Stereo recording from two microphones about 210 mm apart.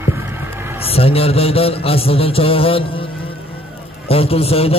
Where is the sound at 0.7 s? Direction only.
30° left (ahead or behind).